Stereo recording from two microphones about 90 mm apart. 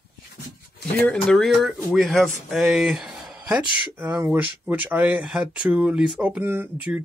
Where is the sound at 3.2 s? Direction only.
5° right (ahead or behind).